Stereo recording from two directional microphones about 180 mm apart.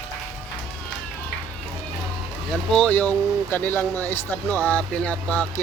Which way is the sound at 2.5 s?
5° left (ahead or behind).